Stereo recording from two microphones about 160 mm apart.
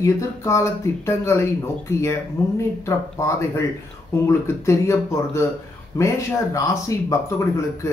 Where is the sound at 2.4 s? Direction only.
20° left (ahead or behind).